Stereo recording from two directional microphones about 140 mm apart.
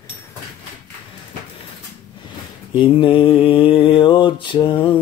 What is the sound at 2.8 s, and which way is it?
Mantra, 35° left (ahead or behind).